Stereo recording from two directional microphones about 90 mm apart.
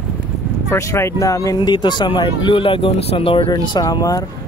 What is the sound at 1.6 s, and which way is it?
Speech, 60° left (ahead or behind).